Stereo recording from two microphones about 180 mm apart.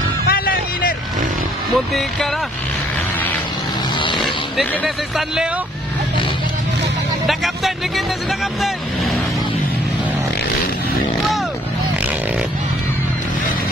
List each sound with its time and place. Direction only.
0.3 s music: 55° left (ahead or behind)
4.2 s speech: centre (ahead or behind)
7.2 s speech: centre (ahead or behind)